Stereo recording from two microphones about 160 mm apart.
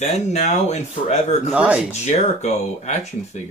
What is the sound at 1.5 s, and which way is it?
Speech, 5° right (ahead or behind).